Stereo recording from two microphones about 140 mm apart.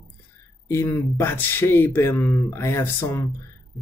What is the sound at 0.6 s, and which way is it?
Speech, 20° left (ahead or behind).